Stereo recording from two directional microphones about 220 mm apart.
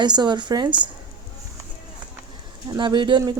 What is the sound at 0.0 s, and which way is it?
Speech, 20° right (ahead or behind).